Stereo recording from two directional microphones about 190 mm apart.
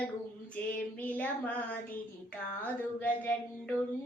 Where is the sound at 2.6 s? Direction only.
10° left (ahead or behind).